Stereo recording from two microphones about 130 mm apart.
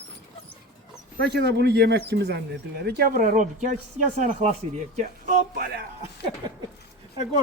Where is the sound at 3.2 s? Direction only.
85° right.